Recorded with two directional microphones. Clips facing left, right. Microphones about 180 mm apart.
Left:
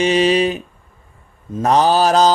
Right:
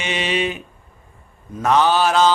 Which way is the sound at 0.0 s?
35° left (ahead or behind).